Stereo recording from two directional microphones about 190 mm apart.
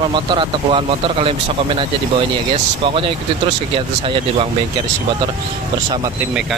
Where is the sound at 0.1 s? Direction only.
25° right (ahead or behind).